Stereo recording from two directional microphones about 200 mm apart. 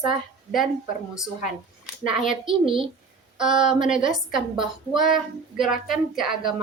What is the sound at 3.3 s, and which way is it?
Speech, 5° right (ahead or behind).